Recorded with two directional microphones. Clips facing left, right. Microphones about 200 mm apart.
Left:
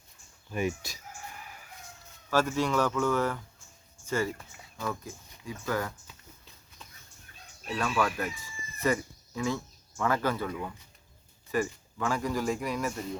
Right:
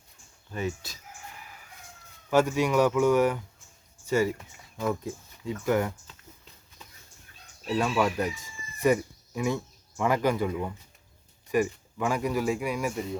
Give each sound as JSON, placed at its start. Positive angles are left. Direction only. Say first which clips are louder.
{"t": 0.5, "sound": "speech", "louder": "left 1 dB", "side_deg": 15}
{"t": 2.3, "sound": "speech", "louder": "right 4 dB", "side_deg": -15}
{"t": 4.8, "sound": "speech", "louder": "right 6 dB", "side_deg": -25}
{"t": 7.8, "sound": "speech", "louder": "right 3 dB", "side_deg": -20}
{"t": 8.8, "sound": "a sound", "louder": "right 5 dB", "side_deg": -15}
{"t": 10.0, "sound": "speech", "louder": "right 4 dB", "side_deg": -15}